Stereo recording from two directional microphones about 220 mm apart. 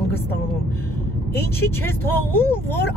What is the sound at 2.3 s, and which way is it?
Speech, 10° left (ahead or behind).